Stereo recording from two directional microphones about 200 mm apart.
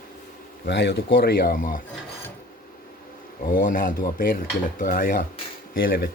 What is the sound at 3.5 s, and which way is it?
Speech, 45° left (ahead or behind).